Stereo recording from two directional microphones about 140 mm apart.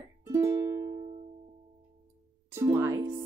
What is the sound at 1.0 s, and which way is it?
Music, 45° right (ahead or behind).